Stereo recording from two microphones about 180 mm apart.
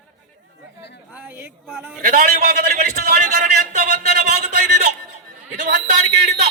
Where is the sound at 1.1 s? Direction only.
10° right (ahead or behind).